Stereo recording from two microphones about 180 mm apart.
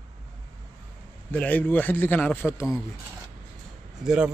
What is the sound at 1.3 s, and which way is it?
A man's voice, 10° left (ahead or behind).